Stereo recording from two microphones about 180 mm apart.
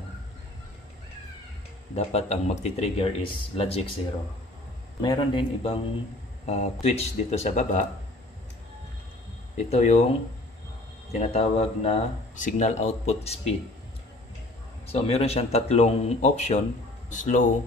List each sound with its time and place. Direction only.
2.0 s speech: 35° left (ahead or behind)
5.0 s a man's voice: 25° left (ahead or behind)
9.6 s speech: 40° left (ahead or behind)
11.1 s speech: 35° left (ahead or behind)
14.9 s speech: 35° left (ahead or behind)